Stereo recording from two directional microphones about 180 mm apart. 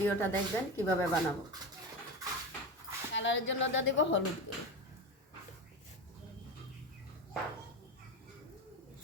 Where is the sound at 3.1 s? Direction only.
90° left.